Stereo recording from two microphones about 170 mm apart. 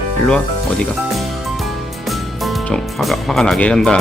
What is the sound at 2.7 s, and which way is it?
Speech, centre (ahead or behind).